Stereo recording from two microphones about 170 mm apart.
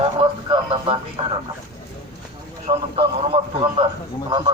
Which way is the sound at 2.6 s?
35° right (ahead or behind).